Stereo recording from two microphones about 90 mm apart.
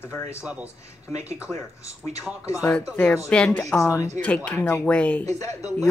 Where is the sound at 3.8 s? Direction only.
35° left (ahead or behind).